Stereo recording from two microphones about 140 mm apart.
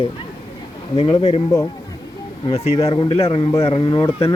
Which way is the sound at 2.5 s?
50° left (ahead or behind).